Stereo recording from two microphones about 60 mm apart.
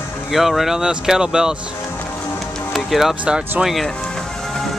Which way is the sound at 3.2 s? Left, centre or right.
Centre.